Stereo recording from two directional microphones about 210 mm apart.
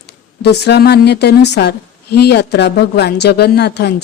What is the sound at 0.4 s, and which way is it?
A woman's voice, 50° left (ahead or behind).